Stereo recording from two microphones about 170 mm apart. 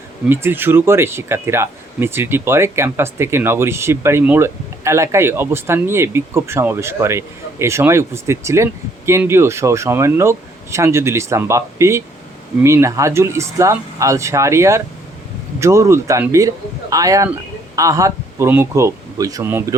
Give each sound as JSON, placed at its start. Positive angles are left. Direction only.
{"t": 0.3, "sound": "speech", "side_deg": -15}